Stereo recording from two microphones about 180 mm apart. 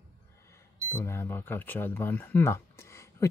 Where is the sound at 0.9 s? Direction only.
10° left (ahead or behind).